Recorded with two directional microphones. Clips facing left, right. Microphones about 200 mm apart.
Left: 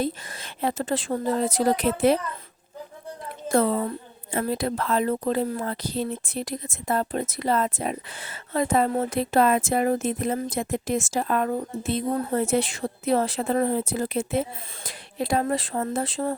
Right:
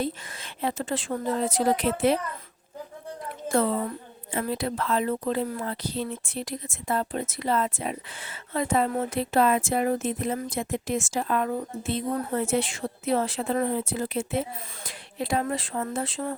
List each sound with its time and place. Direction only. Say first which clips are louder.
0.0 s a woman's voice: left 2 dB; 40° left (ahead or behind)
3.5 s a woman's voice: left 3 dB; 40° left (ahead or behind)